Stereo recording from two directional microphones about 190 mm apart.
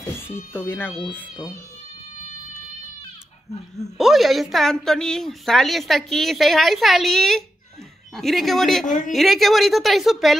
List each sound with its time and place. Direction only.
0.5 s speech: 10° left (ahead or behind)
1.3 s speech: 20° left (ahead or behind)
4.0 s a woman's voice: centre (ahead or behind)
8.8 s a woman's voice: 45° left (ahead or behind)
9.1 s a woman's voice: centre (ahead or behind)